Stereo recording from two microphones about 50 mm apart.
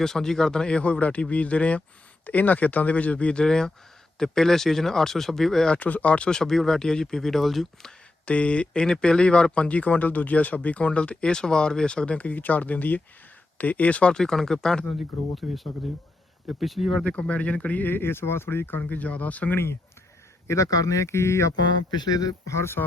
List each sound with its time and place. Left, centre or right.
0.0 s speech: centre
5.7 s speech: left; by 7.9 s centre
8.2 s speech: left
14.1 s speech: centre
14.9 s speech: centre
17.0 s speech: left
17.8 s speech: left
18.8 s speech: left
20.5 s speech: left
22.4 s speech: left